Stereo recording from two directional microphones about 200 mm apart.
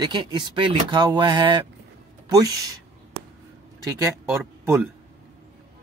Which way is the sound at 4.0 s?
10° right (ahead or behind).